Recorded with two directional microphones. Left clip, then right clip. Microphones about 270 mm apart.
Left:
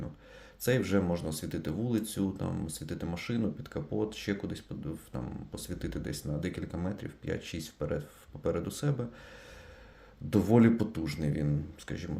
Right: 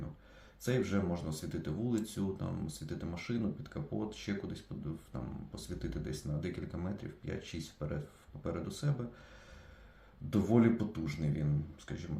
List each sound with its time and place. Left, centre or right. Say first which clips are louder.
0.6 s speech: left 6 dB; left
10.2 s speech: left 5 dB; left